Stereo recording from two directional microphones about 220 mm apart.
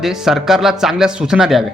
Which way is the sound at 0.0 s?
Centre (ahead or behind).